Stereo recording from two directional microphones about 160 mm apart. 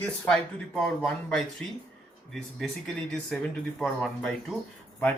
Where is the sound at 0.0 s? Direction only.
5° left (ahead or behind).